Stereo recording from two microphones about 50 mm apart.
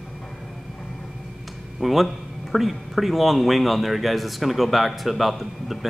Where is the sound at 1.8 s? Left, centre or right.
Centre.